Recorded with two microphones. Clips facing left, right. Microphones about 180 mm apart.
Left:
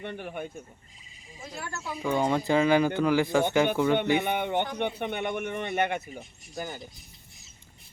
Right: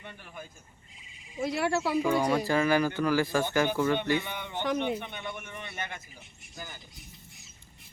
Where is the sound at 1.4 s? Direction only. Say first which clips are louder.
Right 11 dB; 75° right (ahead or behind).